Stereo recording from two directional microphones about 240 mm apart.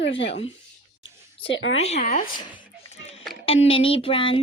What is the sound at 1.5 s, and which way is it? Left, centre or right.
Speech, left.